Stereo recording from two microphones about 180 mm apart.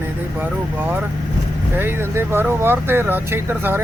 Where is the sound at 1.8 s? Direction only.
15° right (ahead or behind).